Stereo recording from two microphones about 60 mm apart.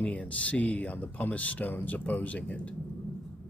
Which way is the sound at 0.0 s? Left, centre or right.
Left.